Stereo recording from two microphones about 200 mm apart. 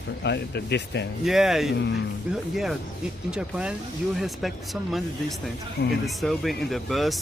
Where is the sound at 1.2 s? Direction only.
Centre (ahead or behind).